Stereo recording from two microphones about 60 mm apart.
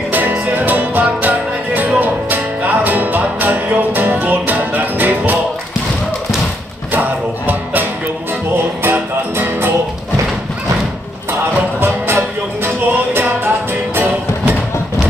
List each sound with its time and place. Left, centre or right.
0.1 s music: right
6.9 s music: right
11.8 s music: right